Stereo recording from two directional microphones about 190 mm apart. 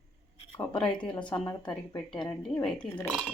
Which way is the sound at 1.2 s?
10° left (ahead or behind).